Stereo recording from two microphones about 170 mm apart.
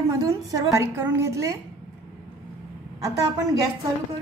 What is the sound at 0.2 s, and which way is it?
A woman's voice, 20° right (ahead or behind).